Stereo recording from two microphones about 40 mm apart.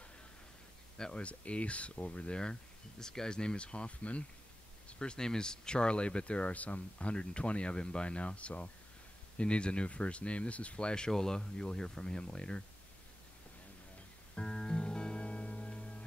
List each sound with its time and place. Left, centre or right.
0.9 s speech: centre
1.2 s speech: left
11.1 s speech: centre
14.3 s music: centre